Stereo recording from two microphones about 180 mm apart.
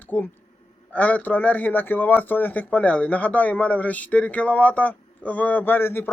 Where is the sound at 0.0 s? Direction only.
10° left (ahead or behind).